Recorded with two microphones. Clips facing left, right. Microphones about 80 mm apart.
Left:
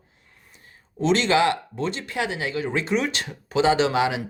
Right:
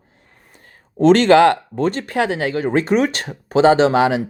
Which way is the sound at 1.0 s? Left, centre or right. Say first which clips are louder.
Right 9 dB; right.